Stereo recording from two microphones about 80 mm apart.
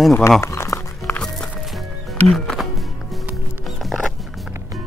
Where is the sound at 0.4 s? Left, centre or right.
Left.